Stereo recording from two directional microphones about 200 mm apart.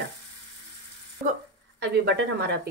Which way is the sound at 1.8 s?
55° right (ahead or behind).